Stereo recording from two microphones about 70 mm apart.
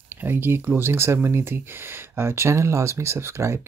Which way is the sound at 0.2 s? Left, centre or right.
Right.